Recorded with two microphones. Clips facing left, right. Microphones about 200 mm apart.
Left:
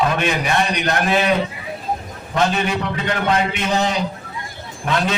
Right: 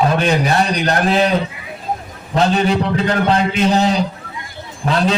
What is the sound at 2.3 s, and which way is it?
A man's voice, 35° right (ahead or behind).